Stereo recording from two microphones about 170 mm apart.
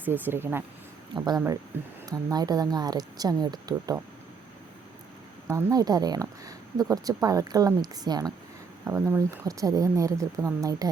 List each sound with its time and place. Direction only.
0.0 s speech: 10° right (ahead or behind)
1.1 s speech: 25° right (ahead or behind)
1.7 s speech: 10° right (ahead or behind)
2.0 s speech: 25° right (ahead or behind)
5.5 s speech: 20° right (ahead or behind)